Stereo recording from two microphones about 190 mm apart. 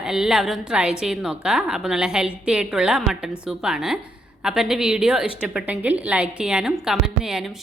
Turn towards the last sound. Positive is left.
turn(degrees=0)  # may be behind; listen again after turning